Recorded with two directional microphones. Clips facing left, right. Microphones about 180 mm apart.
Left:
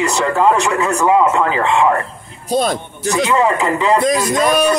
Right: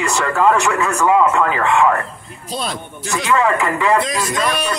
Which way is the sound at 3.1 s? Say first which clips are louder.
Left 2 dB; 20° left (ahead or behind).